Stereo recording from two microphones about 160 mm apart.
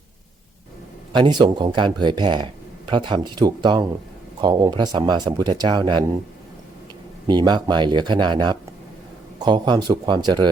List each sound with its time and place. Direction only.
1.1 s speech: 30° right (ahead or behind)
7.3 s speech: 30° right (ahead or behind)